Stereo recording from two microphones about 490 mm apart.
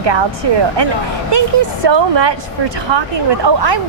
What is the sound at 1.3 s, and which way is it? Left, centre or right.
A woman's voice, right.